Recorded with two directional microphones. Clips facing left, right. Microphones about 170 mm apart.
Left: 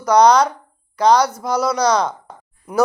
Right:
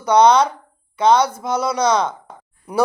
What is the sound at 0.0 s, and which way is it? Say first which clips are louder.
Speech: even; 25° right (ahead or behind).